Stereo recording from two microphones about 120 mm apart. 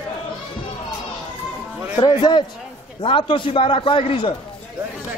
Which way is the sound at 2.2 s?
35° left (ahead or behind).